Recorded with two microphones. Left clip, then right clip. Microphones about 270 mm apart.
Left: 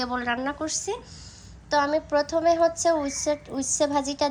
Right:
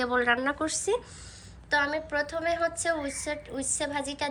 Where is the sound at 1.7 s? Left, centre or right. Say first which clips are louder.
Left 4 dB; centre.